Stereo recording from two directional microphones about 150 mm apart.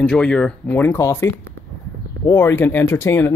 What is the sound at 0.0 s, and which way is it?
Speech, 5° left (ahead or behind).